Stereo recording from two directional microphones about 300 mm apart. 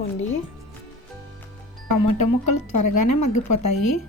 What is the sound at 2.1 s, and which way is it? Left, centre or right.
Speech, left.